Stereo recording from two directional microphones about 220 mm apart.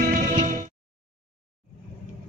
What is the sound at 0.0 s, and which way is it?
Music, 35° right (ahead or behind).